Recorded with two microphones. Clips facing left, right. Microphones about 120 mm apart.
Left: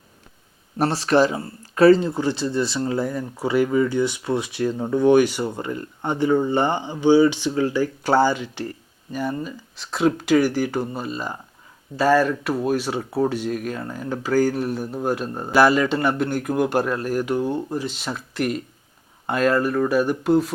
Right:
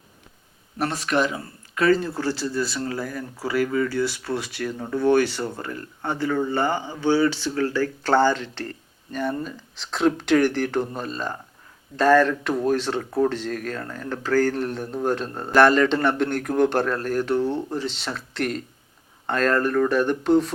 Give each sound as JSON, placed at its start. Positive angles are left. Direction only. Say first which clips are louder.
{"t": 0.8, "sound": "speech", "louder": "left 5 dB", "side_deg": 35}
{"t": 2.0, "sound": "speech", "louder": "left 3 dB", "side_deg": 20}